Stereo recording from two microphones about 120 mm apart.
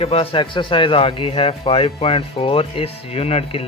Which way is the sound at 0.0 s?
55° left (ahead or behind).